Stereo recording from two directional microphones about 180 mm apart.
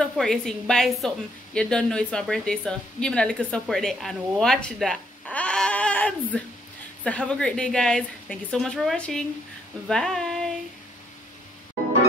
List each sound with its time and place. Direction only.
0.0 s a woman's voice: centre (ahead or behind)